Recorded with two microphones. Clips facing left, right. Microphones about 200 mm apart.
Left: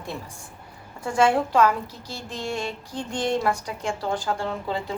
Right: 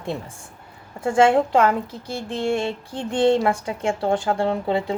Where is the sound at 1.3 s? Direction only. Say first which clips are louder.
Right 3 dB; 25° right (ahead or behind).